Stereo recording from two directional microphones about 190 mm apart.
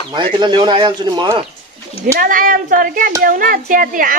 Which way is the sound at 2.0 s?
45° right (ahead or behind).